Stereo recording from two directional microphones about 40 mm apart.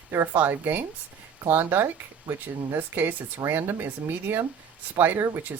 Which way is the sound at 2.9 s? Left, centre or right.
Right.